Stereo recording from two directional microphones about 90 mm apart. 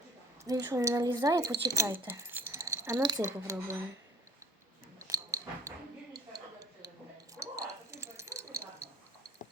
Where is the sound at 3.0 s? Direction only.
50° right (ahead or behind).